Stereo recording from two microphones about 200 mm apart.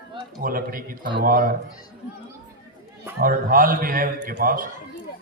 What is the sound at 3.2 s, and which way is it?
A man's voice, 45° right (ahead or behind).